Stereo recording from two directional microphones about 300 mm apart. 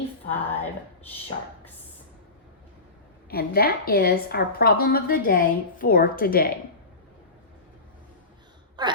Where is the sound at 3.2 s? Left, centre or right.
Left.